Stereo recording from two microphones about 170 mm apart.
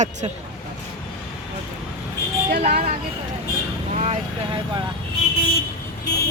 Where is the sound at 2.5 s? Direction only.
60° right (ahead or behind).